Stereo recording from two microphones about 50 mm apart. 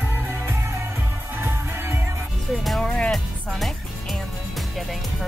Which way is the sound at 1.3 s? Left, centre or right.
Right.